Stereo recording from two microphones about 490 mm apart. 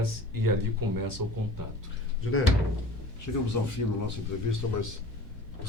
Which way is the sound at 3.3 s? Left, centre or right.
Left.